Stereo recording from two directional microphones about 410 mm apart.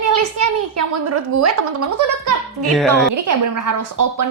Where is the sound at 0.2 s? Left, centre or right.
Right.